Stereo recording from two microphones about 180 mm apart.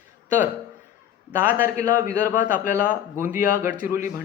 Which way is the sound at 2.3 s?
50° left (ahead or behind).